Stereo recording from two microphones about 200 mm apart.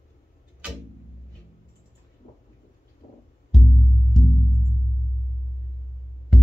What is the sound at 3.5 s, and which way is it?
Music, centre (ahead or behind).